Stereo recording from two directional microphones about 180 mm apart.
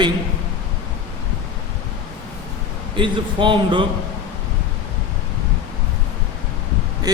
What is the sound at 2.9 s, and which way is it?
Speech, 25° right (ahead or behind).